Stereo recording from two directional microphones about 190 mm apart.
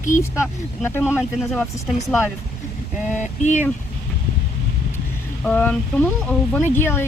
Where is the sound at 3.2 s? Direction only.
40° left (ahead or behind).